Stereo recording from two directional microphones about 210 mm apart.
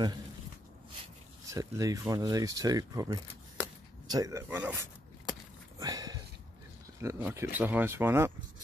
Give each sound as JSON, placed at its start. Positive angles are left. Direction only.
{"t": 1.5, "sound": "speech", "side_deg": -15}
{"t": 5.8, "sound": "a sound", "side_deg": -20}
{"t": 7.0, "sound": "speech", "side_deg": -15}